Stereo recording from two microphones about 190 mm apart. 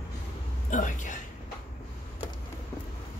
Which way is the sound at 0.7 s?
40° left (ahead or behind).